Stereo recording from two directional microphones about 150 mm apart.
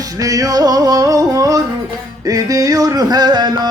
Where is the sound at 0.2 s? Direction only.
25° right (ahead or behind).